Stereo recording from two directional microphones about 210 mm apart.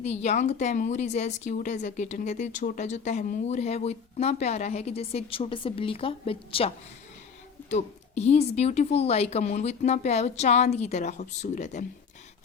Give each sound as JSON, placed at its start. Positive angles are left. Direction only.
{"t": 0.0, "sound": "a woman's voice", "side_deg": 30}